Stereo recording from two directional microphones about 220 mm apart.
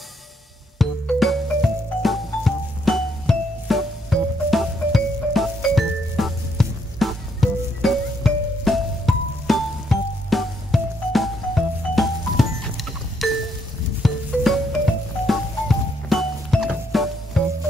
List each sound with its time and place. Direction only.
0.7 s music: centre (ahead or behind)